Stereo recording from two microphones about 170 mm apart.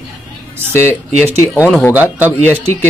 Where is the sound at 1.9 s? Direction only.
10° right (ahead or behind).